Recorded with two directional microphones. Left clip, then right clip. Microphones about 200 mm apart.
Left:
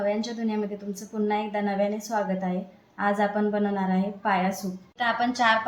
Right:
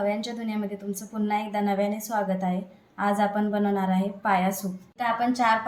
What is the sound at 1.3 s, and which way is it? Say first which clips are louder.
A woman's voice: right 2 dB; 35° right (ahead or behind).